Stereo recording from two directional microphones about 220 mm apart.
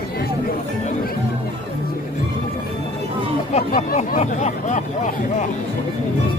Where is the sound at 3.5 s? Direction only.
35° left (ahead or behind).